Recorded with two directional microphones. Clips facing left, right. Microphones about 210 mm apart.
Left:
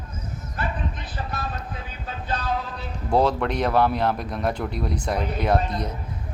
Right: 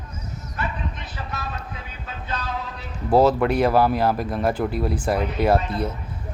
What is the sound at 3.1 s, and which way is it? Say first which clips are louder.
Speech: right 4 dB; 5° right (ahead or behind).